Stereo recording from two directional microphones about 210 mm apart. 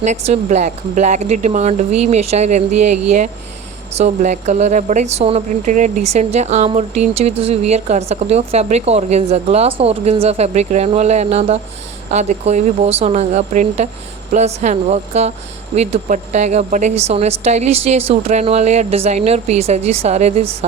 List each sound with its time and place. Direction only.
0.0 s a woman's voice: 35° right (ahead or behind)
3.9 s a woman's voice: 35° right (ahead or behind)